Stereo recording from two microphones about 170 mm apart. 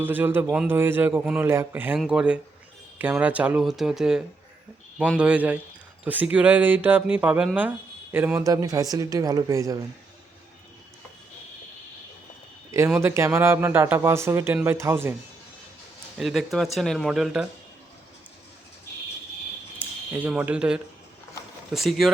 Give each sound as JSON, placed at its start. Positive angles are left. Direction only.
{"t": 0.0, "sound": "speech", "side_deg": -10}
{"t": 13.0, "sound": "speech", "side_deg": -15}
{"t": 16.1, "sound": "speech", "side_deg": 0}
{"t": 19.8, "sound": "speech", "side_deg": -10}